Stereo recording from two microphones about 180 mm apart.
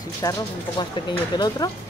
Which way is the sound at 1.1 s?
25° left (ahead or behind).